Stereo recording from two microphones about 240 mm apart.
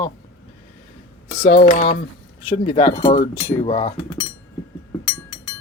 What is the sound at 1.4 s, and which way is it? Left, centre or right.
Speech, left.